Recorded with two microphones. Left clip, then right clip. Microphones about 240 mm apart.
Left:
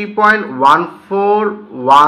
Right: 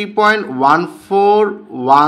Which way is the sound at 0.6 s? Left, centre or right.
Right.